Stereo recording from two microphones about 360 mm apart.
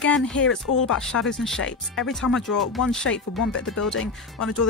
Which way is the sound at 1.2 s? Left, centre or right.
Centre.